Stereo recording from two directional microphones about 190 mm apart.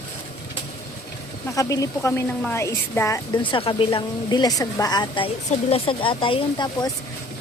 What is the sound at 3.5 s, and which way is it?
A woman's voice, 30° left (ahead or behind).